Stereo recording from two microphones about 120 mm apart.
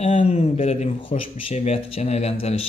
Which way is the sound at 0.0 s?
65° left (ahead or behind).